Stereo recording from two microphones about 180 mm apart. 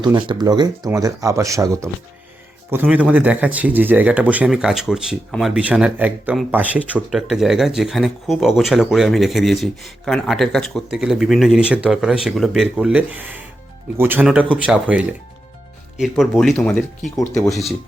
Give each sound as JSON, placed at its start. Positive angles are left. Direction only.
{"t": 0.0, "sound": "speech", "side_deg": -25}
{"t": 2.9, "sound": "speech", "side_deg": -5}